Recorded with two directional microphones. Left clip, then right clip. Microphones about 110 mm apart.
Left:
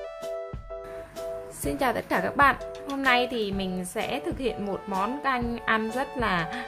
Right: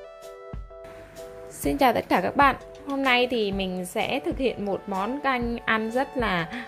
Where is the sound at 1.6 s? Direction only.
35° right (ahead or behind).